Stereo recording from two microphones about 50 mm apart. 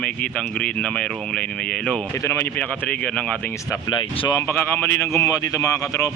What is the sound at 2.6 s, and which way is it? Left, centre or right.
Speech, left.